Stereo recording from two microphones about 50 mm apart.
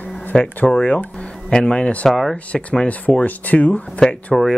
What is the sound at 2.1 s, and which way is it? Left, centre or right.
Speech, centre.